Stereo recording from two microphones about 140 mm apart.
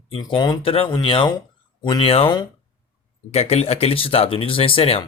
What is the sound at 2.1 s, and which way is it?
Speech, 40° left (ahead or behind).